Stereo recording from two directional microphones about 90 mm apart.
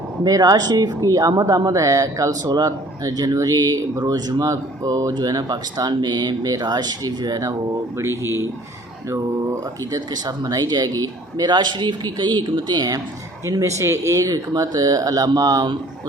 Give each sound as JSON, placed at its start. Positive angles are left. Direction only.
{"t": 0.3, "sound": "speech", "side_deg": -45}
{"t": 7.9, "sound": "speech", "side_deg": -30}
{"t": 10.2, "sound": "speech", "side_deg": -45}
{"t": 13.4, "sound": "speech", "side_deg": -35}